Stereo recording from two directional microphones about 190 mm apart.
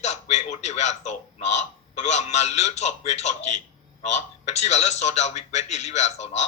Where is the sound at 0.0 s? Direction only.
35° left (ahead or behind).